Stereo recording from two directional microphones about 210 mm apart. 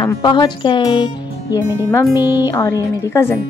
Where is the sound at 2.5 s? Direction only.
15° left (ahead or behind).